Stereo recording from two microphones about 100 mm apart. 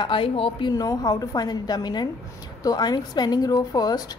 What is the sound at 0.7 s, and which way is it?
A woman's voice, 40° left (ahead or behind).